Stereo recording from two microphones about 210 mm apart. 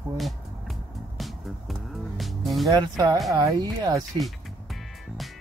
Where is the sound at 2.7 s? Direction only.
20° right (ahead or behind).